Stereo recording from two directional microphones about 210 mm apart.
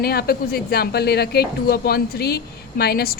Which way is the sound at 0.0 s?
45° left (ahead or behind).